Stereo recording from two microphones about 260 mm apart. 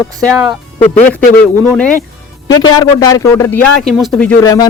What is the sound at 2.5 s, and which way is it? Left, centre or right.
Speech, centre.